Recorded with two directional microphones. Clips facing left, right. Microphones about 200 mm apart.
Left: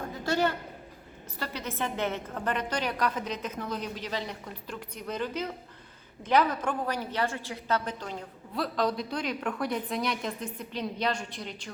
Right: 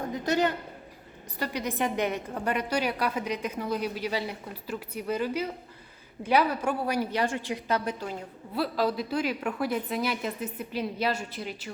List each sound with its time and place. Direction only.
0.3 s a woman's voice: 15° right (ahead or behind)